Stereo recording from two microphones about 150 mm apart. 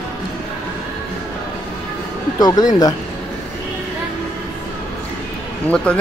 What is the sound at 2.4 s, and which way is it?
Speech, 25° left (ahead or behind).